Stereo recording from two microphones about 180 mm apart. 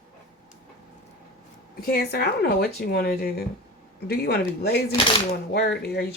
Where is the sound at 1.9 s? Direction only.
60° left (ahead or behind).